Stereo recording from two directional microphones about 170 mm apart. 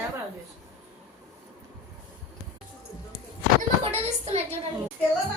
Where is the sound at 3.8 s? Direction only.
40° right (ahead or behind).